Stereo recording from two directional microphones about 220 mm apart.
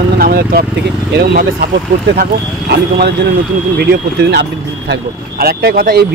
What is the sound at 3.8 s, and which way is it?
Speech, 50° right (ahead or behind).